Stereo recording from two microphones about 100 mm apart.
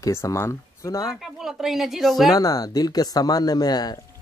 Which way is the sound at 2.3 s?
40° left (ahead or behind).